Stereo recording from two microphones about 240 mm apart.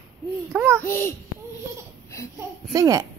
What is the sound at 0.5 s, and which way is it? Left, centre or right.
Babbling, centre.